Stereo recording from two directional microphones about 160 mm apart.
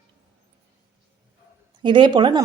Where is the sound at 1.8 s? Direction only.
30° right (ahead or behind).